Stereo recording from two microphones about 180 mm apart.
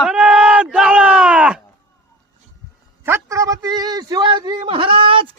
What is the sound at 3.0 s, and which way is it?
A man's voice, 15° right (ahead or behind).